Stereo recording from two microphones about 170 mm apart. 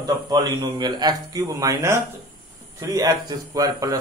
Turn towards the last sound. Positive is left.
turn(degrees=-20)  # may be behind; listen again after turning